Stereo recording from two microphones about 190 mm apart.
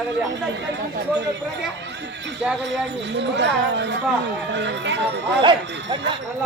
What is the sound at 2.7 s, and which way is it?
Speech, 70° right (ahead or behind).